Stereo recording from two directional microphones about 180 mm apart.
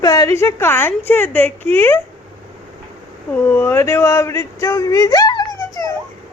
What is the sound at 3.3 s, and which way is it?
Speech, 10° left (ahead or behind).